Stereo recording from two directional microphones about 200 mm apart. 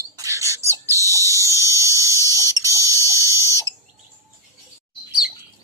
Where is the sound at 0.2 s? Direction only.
15° right (ahead or behind).